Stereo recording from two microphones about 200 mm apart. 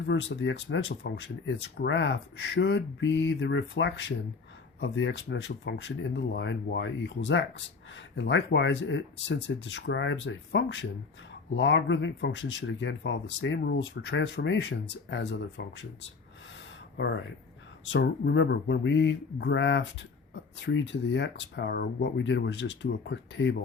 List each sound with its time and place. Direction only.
0.0 s speech: 65° left (ahead or behind)
17.8 s speech: 60° left (ahead or behind)